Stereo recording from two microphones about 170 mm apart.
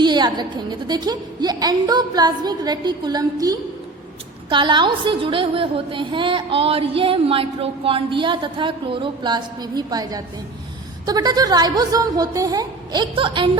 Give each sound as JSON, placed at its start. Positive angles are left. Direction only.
{"t": 0.0, "sound": "a woman's voice", "side_deg": -25}